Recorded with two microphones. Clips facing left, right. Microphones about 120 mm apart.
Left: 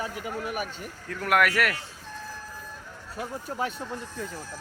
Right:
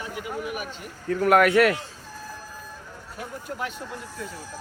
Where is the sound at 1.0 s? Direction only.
25° right (ahead or behind).